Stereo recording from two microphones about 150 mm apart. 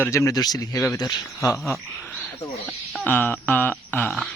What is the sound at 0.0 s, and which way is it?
Speech, 20° left (ahead or behind).